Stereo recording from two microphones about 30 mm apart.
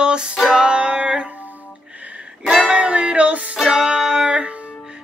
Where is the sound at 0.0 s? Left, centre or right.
Right.